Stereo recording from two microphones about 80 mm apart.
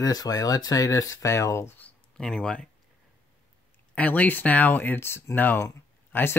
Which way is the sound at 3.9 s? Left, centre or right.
Centre.